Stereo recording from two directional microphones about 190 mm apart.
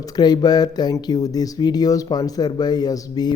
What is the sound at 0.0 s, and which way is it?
Speech, 20° left (ahead or behind).